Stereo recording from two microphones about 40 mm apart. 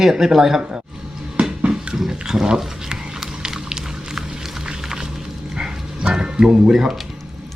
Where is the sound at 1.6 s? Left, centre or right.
Right.